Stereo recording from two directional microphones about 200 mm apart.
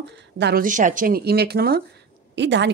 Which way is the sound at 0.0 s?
60° right (ahead or behind).